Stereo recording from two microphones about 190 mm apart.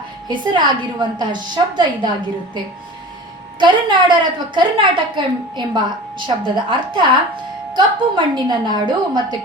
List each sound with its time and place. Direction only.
0.3 s a woman's voice: 25° right (ahead or behind)
3.6 s a woman's voice: 25° right (ahead or behind)